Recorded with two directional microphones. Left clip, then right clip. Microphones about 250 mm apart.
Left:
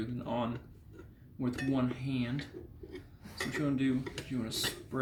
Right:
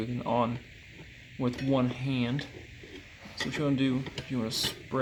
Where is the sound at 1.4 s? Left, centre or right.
Right.